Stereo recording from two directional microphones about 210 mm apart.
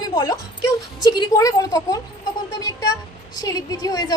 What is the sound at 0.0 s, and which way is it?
A woman's voice, 20° left (ahead or behind).